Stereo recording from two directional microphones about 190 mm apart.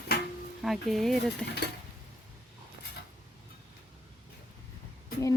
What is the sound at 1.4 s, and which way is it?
Dishes, 60° left (ahead or behind).